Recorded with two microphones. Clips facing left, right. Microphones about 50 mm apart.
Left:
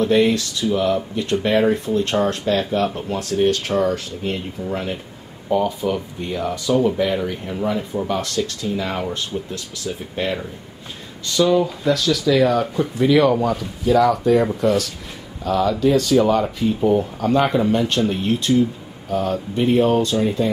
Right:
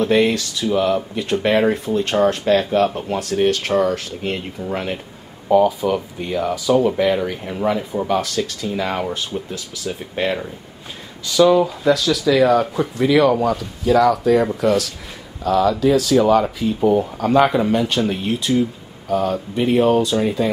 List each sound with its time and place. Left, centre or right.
0.0 s speech: centre